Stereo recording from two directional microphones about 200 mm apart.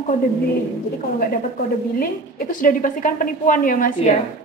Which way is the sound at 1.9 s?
45° left (ahead or behind).